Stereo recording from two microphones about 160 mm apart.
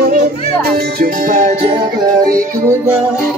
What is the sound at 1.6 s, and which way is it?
Music, 35° right (ahead or behind).